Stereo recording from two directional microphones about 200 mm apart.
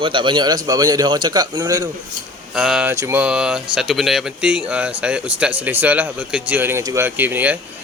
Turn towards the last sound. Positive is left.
turn(degrees=-10)  # may be behind; listen again after turning